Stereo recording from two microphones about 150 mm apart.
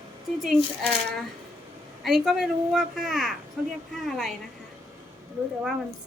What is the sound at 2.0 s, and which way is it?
A woman's voice, centre (ahead or behind).